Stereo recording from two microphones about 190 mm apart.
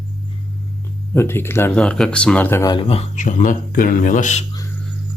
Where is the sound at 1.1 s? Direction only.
10° left (ahead or behind); by 4.4 s 40° left (ahead or behind).